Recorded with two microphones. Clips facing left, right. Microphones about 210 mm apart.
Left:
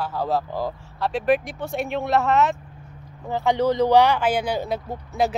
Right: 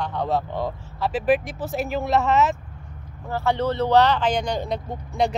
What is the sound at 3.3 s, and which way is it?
Speech, 15° left (ahead or behind).